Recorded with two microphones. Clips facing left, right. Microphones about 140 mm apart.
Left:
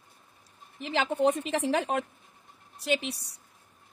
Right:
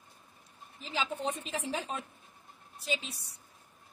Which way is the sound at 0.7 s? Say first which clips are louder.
Left 8 dB; 70° left (ahead or behind).